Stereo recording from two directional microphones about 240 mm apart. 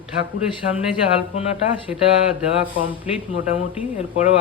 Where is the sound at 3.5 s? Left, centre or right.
Centre.